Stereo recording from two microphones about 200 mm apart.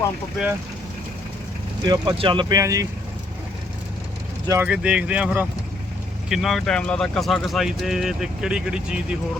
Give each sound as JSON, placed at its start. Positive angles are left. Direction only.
{"t": 1.8, "sound": "speech", "side_deg": -20}
{"t": 4.4, "sound": "speech", "side_deg": -10}